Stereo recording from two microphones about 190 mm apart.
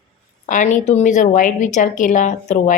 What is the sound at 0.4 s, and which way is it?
A woman's voice, 40° left (ahead or behind).